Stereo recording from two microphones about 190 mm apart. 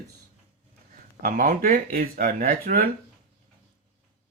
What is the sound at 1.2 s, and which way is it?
Speech, 45° right (ahead or behind).